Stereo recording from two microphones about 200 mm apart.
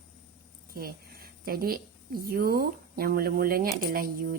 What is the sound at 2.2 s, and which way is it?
Speech, 50° right (ahead or behind).